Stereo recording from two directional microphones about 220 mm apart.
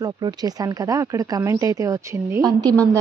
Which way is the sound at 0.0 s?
20° right (ahead or behind).